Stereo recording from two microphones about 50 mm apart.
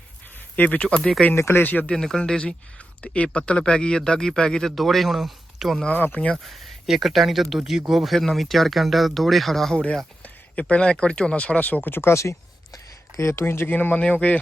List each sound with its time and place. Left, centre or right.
0.5 s speech: left
1.4 s speech: left
1.6 s speech: left
2.0 s a man's voice: centre
4.7 s speech: centre
5.9 s speech: left
6.3 s speech: centre
10.2 s speech: left
11.9 s speech: left
12.1 s speech: left
13.4 s speech: left
13.7 s speech: left